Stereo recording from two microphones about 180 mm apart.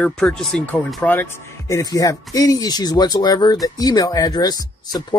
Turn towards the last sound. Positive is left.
turn(degrees=20)  # may be behind; listen again after turning